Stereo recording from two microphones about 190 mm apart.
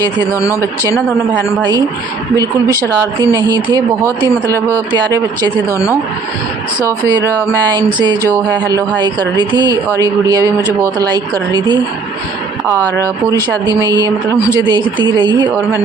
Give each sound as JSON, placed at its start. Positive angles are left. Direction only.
{"t": 0.3, "sound": "a woman's voice", "side_deg": 15}
{"t": 3.2, "sound": "a woman's voice", "side_deg": -20}
{"t": 7.7, "sound": "a woman's voice", "side_deg": -20}
{"t": 13.3, "sound": "a woman's voice", "side_deg": -20}